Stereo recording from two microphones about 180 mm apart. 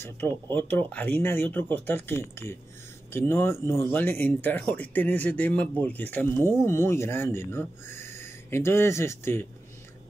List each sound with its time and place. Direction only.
0.0 s speech: 10° left (ahead or behind)